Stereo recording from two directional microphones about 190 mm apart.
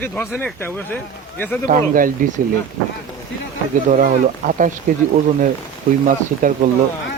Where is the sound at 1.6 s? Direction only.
45° right (ahead or behind).